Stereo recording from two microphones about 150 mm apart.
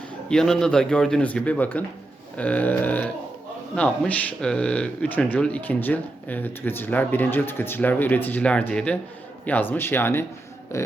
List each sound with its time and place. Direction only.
0.3 s a man's voice: 5° left (ahead or behind)
10.7 s music: 20° left (ahead or behind)